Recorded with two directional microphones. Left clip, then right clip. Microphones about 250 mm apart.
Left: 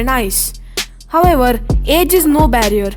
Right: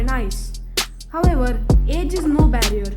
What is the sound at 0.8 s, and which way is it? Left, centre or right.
Music, centre.